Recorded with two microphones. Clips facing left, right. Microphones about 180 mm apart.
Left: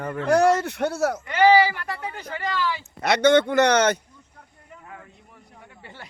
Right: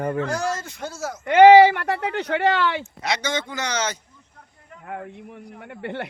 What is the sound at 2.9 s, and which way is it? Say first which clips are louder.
Speech: left 9 dB; 60° left (ahead or behind).